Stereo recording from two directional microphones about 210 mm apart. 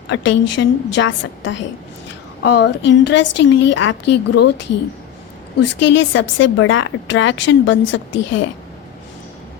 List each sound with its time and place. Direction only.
0.1 s a woman's voice: 60° left (ahead or behind)
5.5 s a woman's voice: 60° left (ahead or behind)